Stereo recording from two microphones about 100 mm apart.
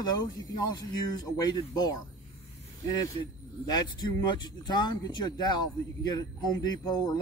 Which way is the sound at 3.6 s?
45° left (ahead or behind).